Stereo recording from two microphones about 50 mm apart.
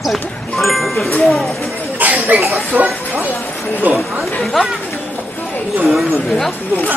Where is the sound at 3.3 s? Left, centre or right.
Left.